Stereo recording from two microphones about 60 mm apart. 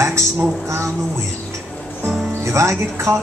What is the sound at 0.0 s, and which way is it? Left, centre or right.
Speech, right.